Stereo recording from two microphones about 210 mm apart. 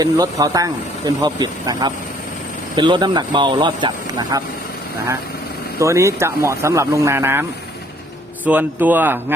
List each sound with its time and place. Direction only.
0.0 s speech: 15° right (ahead or behind)
5.8 s speech: 15° right (ahead or behind)
8.4 s speech: 10° right (ahead or behind)